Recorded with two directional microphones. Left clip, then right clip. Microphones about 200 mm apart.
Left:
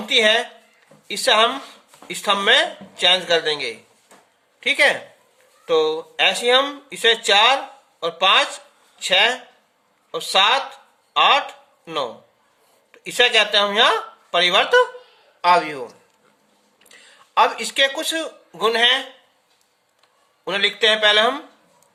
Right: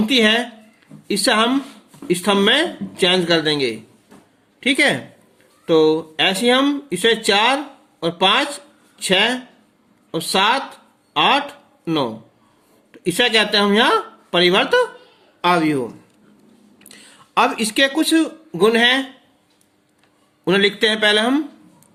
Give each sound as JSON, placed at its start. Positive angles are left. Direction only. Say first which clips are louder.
{"t": 0.0, "sound": "speech", "louder": "even", "side_deg": -15}
{"t": 16.9, "sound": "speech", "louder": "right 1 dB", "side_deg": -25}
{"t": 20.4, "sound": "speech", "louder": "right 2 dB", "side_deg": -20}